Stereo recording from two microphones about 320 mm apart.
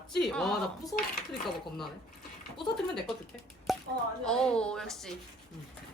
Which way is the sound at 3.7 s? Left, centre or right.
Centre.